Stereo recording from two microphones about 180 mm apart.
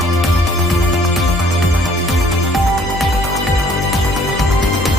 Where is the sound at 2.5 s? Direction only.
Centre (ahead or behind).